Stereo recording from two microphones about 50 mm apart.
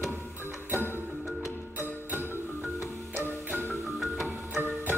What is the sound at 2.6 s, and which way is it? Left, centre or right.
Music, centre.